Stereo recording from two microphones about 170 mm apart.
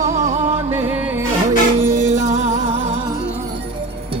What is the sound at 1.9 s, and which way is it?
Music, 45° right (ahead or behind).